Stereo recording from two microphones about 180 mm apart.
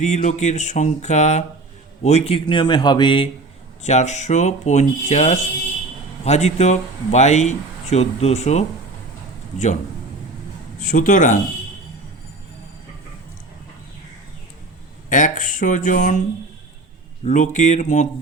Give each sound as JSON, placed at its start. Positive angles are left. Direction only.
{"t": 0.0, "sound": "speech", "side_deg": 40}
{"t": 3.8, "sound": "speech", "side_deg": 40}
{"t": 10.8, "sound": "a man's voice", "side_deg": 45}
{"t": 15.1, "sound": "speech", "side_deg": 45}
{"t": 17.2, "sound": "speech", "side_deg": 40}